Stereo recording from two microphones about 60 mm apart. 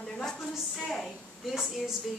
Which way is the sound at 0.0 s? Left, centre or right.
Centre.